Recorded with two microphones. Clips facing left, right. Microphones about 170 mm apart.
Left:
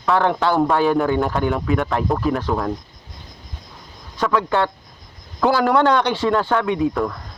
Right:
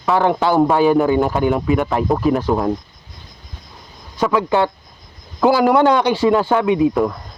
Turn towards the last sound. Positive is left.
turn(degrees=-15)  # may be behind; listen again after turning